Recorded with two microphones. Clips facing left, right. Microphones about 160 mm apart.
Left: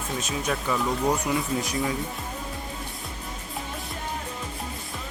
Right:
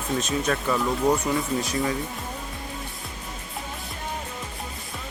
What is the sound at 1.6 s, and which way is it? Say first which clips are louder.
Speech: right 2 dB; 15° left (ahead or behind).